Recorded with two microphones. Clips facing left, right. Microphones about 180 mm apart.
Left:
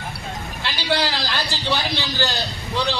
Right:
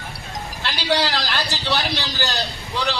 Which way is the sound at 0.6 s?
15° left (ahead or behind).